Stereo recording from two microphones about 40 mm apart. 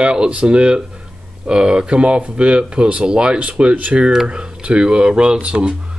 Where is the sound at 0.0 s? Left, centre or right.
Right.